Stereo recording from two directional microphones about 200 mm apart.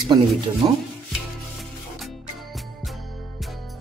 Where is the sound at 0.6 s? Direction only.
20° right (ahead or behind).